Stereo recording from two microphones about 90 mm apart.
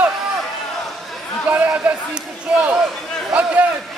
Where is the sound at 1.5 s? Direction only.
15° right (ahead or behind).